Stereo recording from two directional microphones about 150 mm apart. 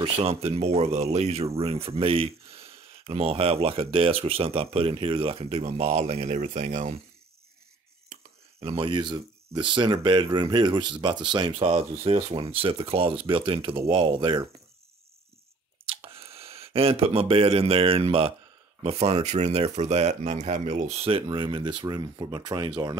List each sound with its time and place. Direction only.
0.0 s speech: 40° right (ahead or behind)
8.5 s speech: 40° right (ahead or behind)
15.9 s speech: 40° right (ahead or behind)